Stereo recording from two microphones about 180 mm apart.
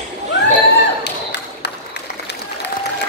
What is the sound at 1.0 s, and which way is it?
Tap, 70° left (ahead or behind).